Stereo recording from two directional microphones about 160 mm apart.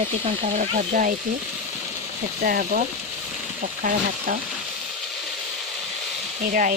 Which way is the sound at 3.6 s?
55° right (ahead or behind).